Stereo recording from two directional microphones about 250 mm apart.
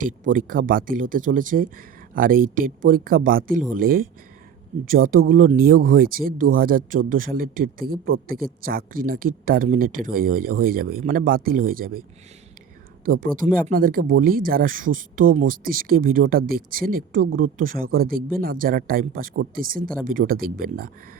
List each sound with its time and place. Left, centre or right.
0.0 s speech: right
13.1 s speech: right